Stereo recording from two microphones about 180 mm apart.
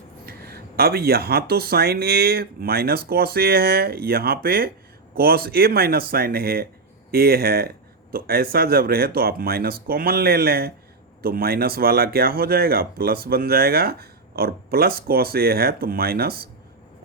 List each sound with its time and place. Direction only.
0.3 s speech: 60° right (ahead or behind)